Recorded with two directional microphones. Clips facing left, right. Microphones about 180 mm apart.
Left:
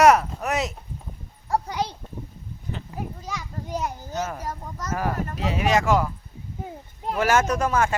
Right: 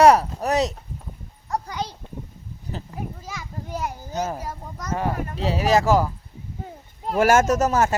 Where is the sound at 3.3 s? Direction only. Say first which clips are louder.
Left 1 dB; 5° right (ahead or behind).